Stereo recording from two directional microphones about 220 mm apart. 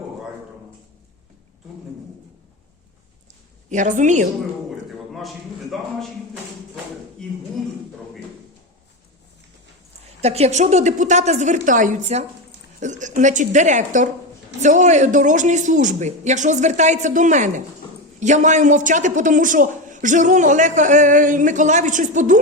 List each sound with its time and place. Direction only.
3.7 s a man's voice: 35° right (ahead or behind)
5.7 s a man's voice: centre (ahead or behind)
10.2 s a man's voice: 30° right (ahead or behind)